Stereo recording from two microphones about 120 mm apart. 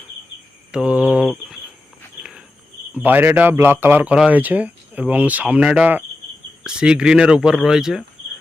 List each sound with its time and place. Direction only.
0.7 s speech: 10° right (ahead or behind)
2.9 s speech: 15° right (ahead or behind)